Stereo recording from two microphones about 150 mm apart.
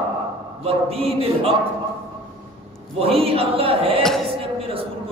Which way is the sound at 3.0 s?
40° right (ahead or behind).